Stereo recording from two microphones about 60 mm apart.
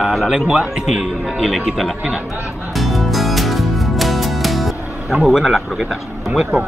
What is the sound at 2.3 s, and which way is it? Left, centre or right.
Speech, right.